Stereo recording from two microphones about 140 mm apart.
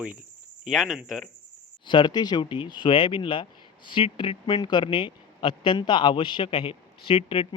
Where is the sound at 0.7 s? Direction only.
Centre (ahead or behind).